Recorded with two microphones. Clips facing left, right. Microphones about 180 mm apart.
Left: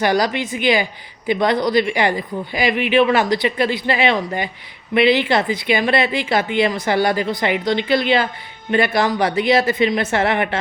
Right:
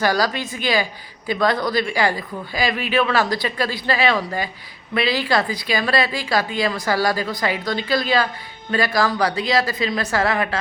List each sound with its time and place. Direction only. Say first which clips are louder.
0.0 s speech: left 2 dB; 20° left (ahead or behind)